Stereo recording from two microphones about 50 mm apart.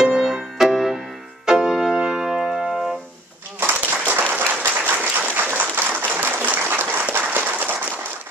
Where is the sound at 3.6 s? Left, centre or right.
Right.